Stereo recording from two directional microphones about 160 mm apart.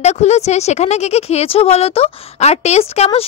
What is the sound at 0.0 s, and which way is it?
A woman's voice, 45° left (ahead or behind).